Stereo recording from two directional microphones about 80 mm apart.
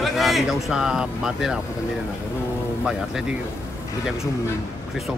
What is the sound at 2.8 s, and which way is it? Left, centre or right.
Speech, centre.